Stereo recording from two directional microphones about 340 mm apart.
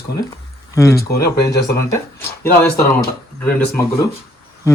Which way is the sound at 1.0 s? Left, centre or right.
Left.